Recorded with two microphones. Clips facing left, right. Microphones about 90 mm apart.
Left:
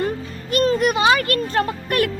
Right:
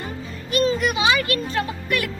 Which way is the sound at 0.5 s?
45° left (ahead or behind).